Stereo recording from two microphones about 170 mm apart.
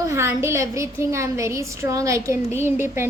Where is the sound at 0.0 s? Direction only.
15° right (ahead or behind).